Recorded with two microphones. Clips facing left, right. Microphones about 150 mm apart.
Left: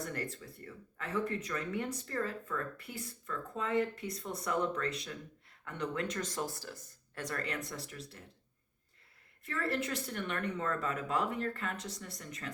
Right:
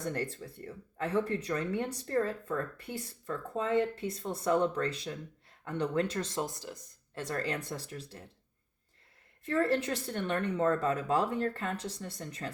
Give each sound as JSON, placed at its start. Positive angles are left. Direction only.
{"t": 0.1, "sound": "speech", "side_deg": -35}
{"t": 7.3, "sound": "speech", "side_deg": -30}
{"t": 9.5, "sound": "speech", "side_deg": -35}